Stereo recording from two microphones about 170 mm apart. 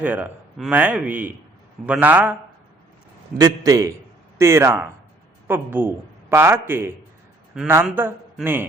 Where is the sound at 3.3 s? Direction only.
20° right (ahead or behind).